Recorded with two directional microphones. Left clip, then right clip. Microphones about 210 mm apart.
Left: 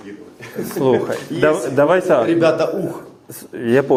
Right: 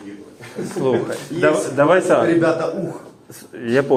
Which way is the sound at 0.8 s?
25° left (ahead or behind).